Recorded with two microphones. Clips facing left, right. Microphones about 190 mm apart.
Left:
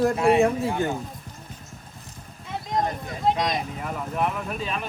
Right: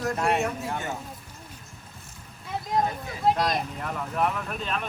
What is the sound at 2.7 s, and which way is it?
Speech, 5° right (ahead or behind).